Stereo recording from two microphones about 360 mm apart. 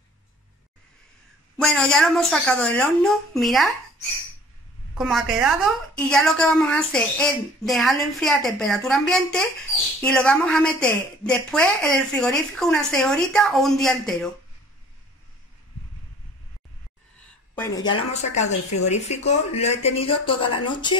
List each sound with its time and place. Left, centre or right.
1.6 s a woman's voice: centre
4.9 s a woman's voice: centre
17.2 s a sound: centre
18.3 s speech: centre